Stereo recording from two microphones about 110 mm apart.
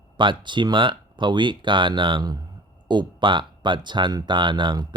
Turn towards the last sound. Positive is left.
turn(degrees=-45)  # may be behind; listen again after turning